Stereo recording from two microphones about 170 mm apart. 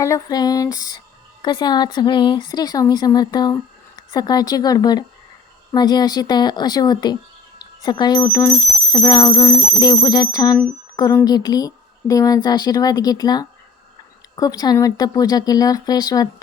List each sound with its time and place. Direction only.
0.0 s a woman's voice: 20° left (ahead or behind)